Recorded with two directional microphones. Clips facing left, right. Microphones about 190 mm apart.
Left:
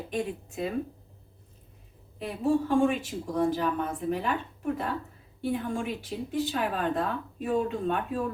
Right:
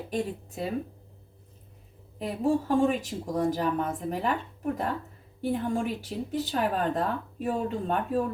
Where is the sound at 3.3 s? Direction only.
45° right (ahead or behind).